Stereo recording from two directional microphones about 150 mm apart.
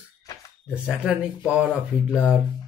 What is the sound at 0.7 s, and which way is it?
Speech, 5° right (ahead or behind).